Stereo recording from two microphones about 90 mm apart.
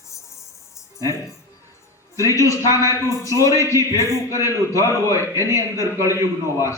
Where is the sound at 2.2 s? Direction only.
35° left (ahead or behind).